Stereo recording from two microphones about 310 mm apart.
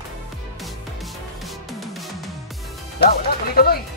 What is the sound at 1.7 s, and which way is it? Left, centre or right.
Music, centre.